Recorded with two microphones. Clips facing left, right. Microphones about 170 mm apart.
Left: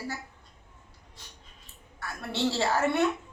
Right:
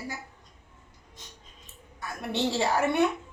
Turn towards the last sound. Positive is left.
turn(degrees=-15)  # may be behind; listen again after turning